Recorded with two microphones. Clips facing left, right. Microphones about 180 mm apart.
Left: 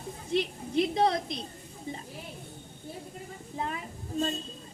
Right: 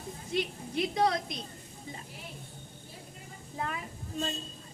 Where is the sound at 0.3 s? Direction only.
30° left (ahead or behind).